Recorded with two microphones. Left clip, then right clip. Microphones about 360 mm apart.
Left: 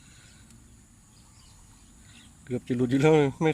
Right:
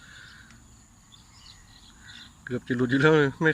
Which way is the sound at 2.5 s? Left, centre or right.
Centre.